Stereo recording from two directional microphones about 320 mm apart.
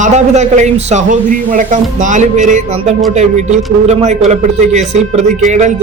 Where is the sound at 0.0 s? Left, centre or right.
Right.